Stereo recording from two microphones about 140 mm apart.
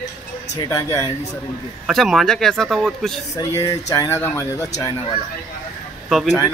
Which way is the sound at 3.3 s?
25° left (ahead or behind).